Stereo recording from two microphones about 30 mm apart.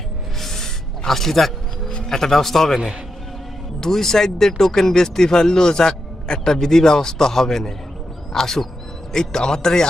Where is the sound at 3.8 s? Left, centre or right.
Centre.